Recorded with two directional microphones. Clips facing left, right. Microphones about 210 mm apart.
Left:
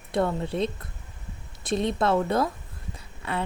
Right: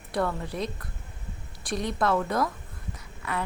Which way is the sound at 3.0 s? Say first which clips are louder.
Left 2 dB; 30° left (ahead or behind).